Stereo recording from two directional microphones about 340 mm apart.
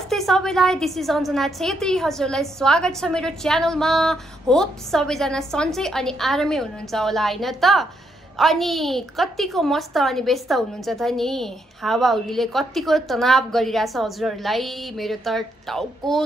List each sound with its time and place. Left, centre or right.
0.1 s a woman's voice: centre